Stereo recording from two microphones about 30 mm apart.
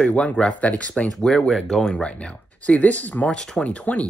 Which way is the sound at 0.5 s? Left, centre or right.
Left.